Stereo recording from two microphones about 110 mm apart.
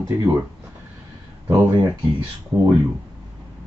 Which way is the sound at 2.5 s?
35° right (ahead or behind).